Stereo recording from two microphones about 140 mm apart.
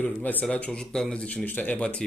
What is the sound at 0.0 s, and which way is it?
A man's voice, 10° left (ahead or behind).